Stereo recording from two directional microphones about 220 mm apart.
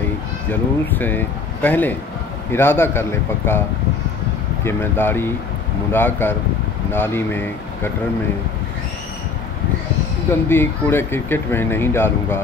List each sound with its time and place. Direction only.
0.5 s speech: 10° left (ahead or behind)
4.6 s speech: 10° left (ahead or behind)
10.5 s speech: 10° left (ahead or behind)